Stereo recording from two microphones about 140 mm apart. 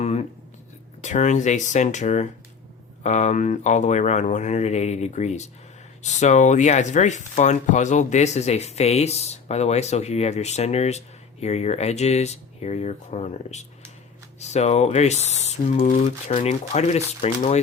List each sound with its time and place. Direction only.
0.0 s writing: 50° left (ahead or behind)
1.0 s speech: 60° left (ahead or behind)